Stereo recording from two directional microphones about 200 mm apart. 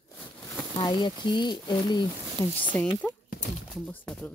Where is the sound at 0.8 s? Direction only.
20° left (ahead or behind).